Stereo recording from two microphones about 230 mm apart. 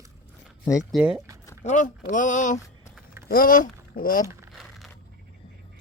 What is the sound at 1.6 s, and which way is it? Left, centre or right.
Speech, left.